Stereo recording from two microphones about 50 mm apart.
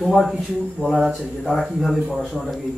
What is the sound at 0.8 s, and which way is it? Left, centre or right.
Speech, centre.